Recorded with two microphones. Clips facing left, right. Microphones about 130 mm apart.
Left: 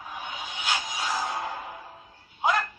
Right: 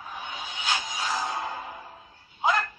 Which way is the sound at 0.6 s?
10° left (ahead or behind).